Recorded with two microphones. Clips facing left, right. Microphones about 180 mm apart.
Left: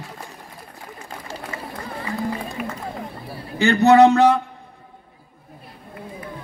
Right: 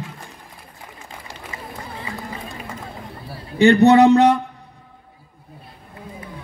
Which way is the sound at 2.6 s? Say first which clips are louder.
Left 6 dB; 30° right (ahead or behind).